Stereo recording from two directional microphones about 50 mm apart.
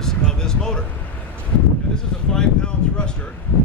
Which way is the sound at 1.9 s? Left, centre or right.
Centre.